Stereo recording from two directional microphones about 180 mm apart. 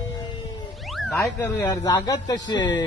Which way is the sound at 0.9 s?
Centre (ahead or behind).